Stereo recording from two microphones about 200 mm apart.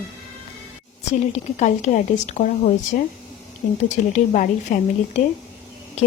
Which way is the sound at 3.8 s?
35° left (ahead or behind).